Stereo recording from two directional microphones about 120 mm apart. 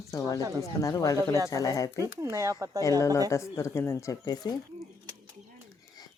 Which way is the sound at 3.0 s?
25° left (ahead or behind).